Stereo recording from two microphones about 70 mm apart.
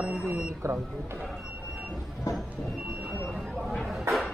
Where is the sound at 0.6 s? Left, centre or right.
Right.